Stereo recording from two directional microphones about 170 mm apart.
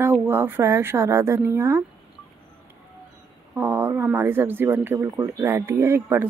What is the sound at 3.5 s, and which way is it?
Speech, 10° right (ahead or behind).